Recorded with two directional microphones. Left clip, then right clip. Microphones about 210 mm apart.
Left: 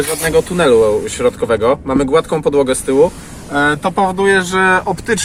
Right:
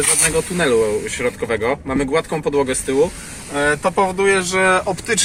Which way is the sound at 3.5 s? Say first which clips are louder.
Left 4 dB; 30° right (ahead or behind).